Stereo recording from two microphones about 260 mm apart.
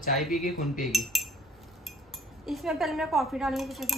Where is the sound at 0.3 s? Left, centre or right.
Left.